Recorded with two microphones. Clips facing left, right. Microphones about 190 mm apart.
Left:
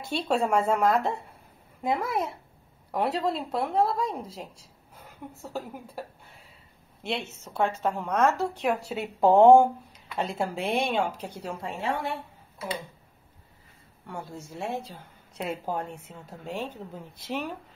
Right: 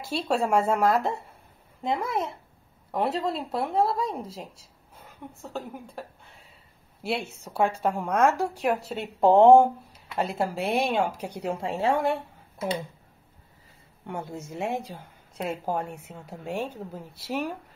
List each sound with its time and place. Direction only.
0.1 s speech: centre (ahead or behind)
7.0 s a woman's voice: 10° right (ahead or behind)
14.0 s a woman's voice: 20° right (ahead or behind)
15.3 s a woman's voice: centre (ahead or behind)